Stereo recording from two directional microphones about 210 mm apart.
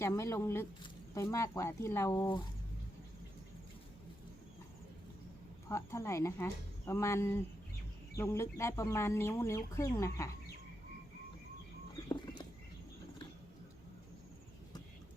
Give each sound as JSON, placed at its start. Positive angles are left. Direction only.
{"t": 0.0, "sound": "speech", "side_deg": 15}
{"t": 5.6, "sound": "speech", "side_deg": 15}
{"t": 12.0, "sound": "a sound", "side_deg": 20}